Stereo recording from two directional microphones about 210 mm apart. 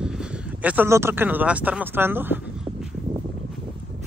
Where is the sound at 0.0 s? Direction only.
5° right (ahead or behind).